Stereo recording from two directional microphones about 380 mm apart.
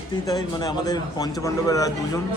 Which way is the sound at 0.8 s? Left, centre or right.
Centre.